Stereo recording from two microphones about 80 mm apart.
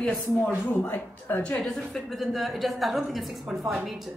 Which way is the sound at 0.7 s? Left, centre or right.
Left.